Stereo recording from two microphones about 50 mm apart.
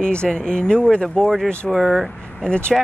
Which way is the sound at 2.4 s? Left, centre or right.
Centre.